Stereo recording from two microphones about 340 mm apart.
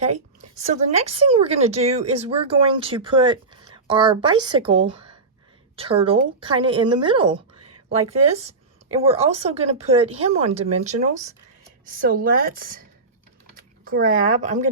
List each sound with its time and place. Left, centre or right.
0.5 s a woman's voice: right